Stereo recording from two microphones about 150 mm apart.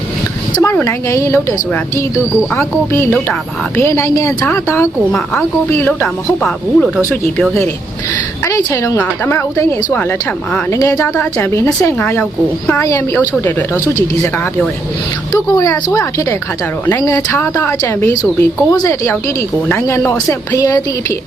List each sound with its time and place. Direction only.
0.5 s a woman's voice: 20° left (ahead or behind)
6.4 s speech: centre (ahead or behind)
8.4 s a woman's voice: 20° left (ahead or behind)
15.3 s a woman's voice: 20° left (ahead or behind)
17.0 s a woman's voice: 20° left (ahead or behind)